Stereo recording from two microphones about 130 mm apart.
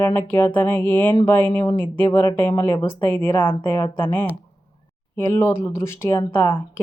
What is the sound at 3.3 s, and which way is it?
Speech, 35° left (ahead or behind).